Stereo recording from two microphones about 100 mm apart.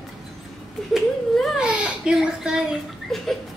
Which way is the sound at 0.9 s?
5° left (ahead or behind).